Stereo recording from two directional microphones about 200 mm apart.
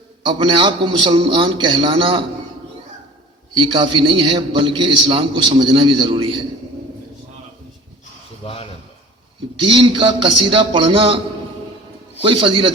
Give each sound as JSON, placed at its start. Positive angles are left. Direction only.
{"t": 0.3, "sound": "a man's voice", "side_deg": -25}
{"t": 3.5, "sound": "a man's voice", "side_deg": -25}
{"t": 8.4, "sound": "a sound", "side_deg": 30}
{"t": 9.6, "sound": "a man's voice", "side_deg": -25}
{"t": 12.2, "sound": "a man's voice", "side_deg": -25}